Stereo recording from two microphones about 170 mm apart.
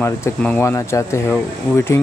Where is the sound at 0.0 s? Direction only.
10° left (ahead or behind).